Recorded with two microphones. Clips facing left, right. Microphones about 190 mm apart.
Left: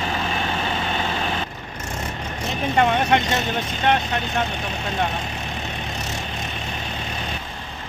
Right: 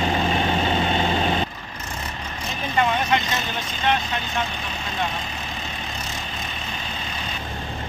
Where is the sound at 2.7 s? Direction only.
55° left (ahead or behind).